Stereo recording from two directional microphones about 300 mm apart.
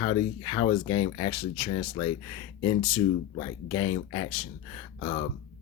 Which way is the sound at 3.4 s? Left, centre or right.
Left.